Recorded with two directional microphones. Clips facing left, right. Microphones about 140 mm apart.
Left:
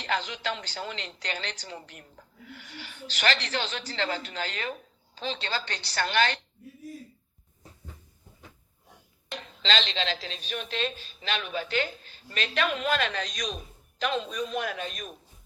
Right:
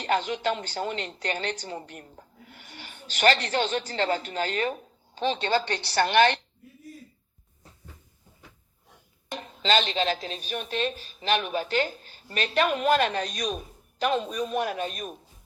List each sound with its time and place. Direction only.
0.0 s a woman's voice: 40° right (ahead or behind)
5.6 s a woman's voice: 20° right (ahead or behind)
9.3 s a woman's voice: 40° right (ahead or behind)